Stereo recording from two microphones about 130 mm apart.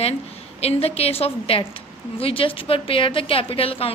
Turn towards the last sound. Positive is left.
turn(degrees=50)  # may be behind; listen again after turning